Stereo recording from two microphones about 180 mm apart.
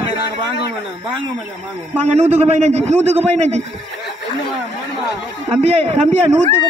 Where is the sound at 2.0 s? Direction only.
35° right (ahead or behind).